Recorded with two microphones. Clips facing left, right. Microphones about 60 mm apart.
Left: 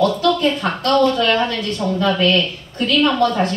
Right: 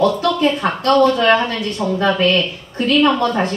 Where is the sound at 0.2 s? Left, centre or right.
Right.